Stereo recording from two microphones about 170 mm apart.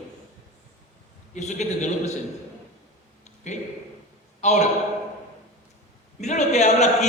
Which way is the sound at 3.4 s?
45° left (ahead or behind).